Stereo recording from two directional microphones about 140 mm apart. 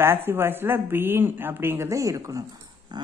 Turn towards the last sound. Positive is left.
turn(degrees=-30)  # may be behind; listen again after turning